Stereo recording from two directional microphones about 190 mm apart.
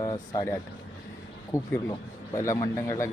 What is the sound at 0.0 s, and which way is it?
Speech, 20° left (ahead or behind).